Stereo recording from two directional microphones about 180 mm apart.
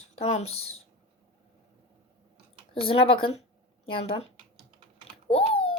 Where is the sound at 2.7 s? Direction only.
30° left (ahead or behind).